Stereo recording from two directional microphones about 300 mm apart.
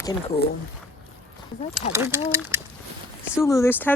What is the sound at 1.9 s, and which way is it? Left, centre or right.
Speech, centre.